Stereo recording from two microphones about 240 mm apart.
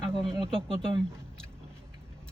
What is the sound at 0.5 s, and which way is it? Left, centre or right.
Speech, right.